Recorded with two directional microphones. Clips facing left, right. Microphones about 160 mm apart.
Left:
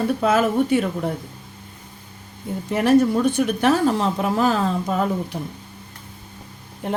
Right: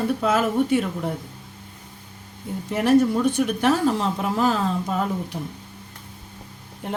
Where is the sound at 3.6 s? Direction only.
65° left (ahead or behind).